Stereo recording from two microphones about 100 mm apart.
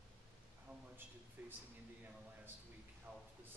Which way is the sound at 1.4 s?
20° right (ahead or behind).